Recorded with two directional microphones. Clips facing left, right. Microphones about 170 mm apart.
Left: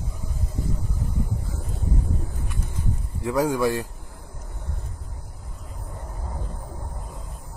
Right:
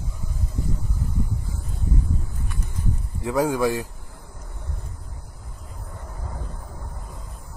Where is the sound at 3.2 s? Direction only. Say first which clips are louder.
Even; 5° right (ahead or behind).